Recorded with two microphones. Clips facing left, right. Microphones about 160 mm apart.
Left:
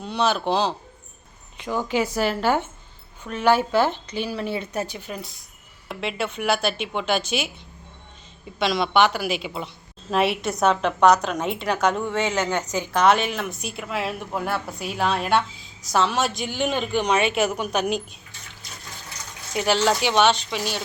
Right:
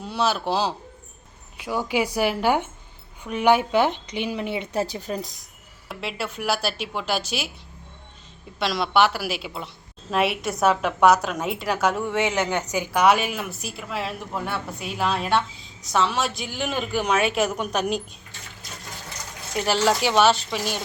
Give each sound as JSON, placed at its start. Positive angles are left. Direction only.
{"t": 0.0, "sound": "a woman's voice", "side_deg": -5}
{"t": 5.9, "sound": "a woman's voice", "side_deg": 0}
{"t": 8.5, "sound": "a woman's voice", "side_deg": 0}
{"t": 19.6, "sound": "a woman's voice", "side_deg": -5}